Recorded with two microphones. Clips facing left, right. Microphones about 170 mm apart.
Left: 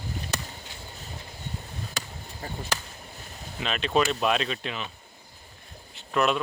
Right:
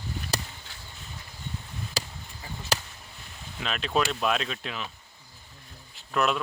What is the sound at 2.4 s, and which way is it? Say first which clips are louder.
Speech: left 5 dB; 45° left (ahead or behind).